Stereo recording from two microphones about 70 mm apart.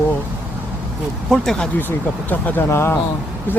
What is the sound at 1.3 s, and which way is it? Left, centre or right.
Speech, centre.